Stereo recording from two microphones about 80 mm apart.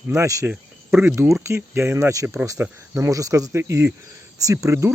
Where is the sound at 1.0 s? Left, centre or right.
Right.